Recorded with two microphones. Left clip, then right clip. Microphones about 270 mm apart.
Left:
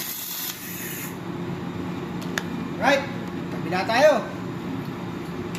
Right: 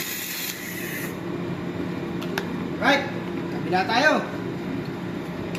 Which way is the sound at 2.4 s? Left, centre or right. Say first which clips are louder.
Left 1 dB; left.